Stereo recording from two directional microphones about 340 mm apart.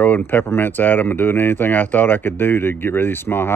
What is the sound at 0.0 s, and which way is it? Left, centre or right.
Speech, centre.